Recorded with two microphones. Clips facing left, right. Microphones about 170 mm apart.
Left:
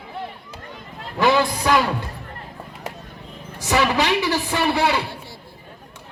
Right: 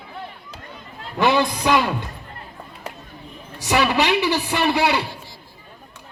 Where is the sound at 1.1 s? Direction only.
20° right (ahead or behind).